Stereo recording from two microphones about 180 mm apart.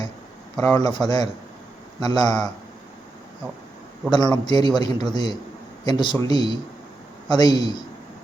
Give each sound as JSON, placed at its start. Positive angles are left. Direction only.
{"t": 0.6, "sound": "a man's voice", "side_deg": 20}
{"t": 4.1, "sound": "a man's voice", "side_deg": 25}